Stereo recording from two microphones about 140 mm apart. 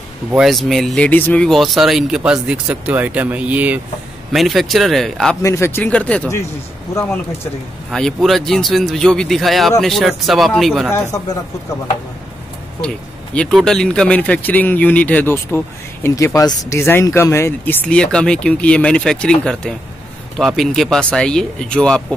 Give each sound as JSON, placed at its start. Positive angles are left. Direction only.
{"t": 0.3, "sound": "speech", "side_deg": 0}
{"t": 4.3, "sound": "speech", "side_deg": 0}
{"t": 5.4, "sound": "speech", "side_deg": 20}
{"t": 7.9, "sound": "speech", "side_deg": 0}
{"t": 10.9, "sound": "speech", "side_deg": 20}
{"t": 12.8, "sound": "speech", "side_deg": 10}